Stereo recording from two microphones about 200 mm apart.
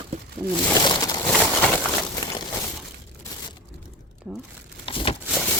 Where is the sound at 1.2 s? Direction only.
5° left (ahead or behind).